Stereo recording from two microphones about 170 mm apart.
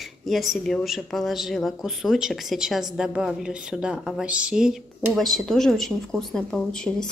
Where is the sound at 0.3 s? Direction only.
Centre (ahead or behind).